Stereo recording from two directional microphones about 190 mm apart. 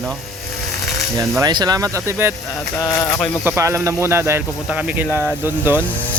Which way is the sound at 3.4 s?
15° right (ahead or behind).